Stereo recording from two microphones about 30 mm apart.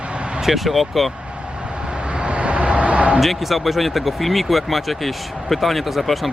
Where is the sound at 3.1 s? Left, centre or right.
Centre.